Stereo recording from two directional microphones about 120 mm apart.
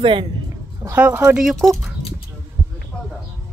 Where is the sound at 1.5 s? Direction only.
Centre (ahead or behind).